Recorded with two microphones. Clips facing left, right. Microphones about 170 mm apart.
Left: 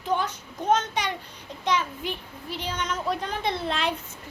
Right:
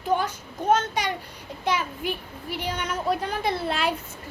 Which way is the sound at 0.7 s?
50° right (ahead or behind).